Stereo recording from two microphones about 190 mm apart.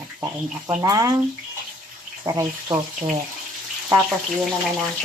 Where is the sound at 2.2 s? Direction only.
15° right (ahead or behind).